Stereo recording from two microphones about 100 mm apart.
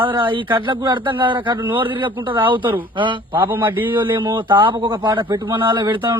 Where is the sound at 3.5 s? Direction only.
20° right (ahead or behind).